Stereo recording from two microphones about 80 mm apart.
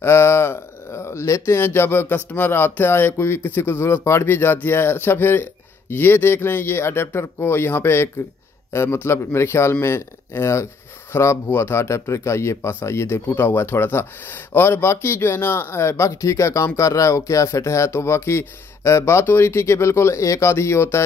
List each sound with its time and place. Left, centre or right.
0.0 s speech: left